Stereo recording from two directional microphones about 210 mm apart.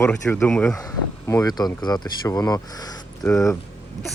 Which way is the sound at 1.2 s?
15° left (ahead or behind).